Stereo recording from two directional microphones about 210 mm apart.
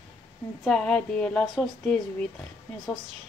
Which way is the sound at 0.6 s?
5° left (ahead or behind).